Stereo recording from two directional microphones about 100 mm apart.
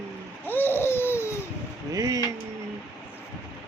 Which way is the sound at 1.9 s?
40° right (ahead or behind).